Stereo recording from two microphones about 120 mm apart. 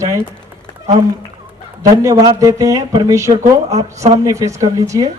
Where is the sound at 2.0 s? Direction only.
30° right (ahead or behind).